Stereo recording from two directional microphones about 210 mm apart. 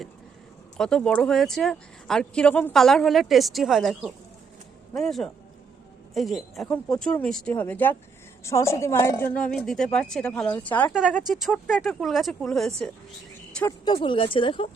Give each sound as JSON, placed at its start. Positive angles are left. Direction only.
{"t": 0.8, "sound": "a woman's voice", "side_deg": 5}
{"t": 13.6, "sound": "speech", "side_deg": 15}